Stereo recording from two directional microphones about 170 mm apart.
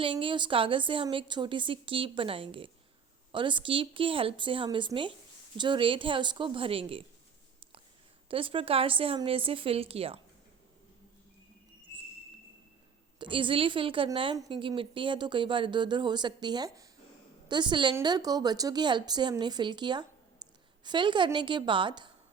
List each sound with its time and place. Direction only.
0.0 s a woman's voice: 30° right (ahead or behind)
8.3 s a woman's voice: 30° right (ahead or behind)
13.1 s a woman's voice: 30° right (ahead or behind)